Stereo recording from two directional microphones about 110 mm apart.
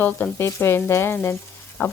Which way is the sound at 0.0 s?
20° left (ahead or behind).